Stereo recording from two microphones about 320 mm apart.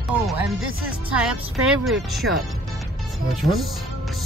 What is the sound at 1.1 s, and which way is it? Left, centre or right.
Speech, centre.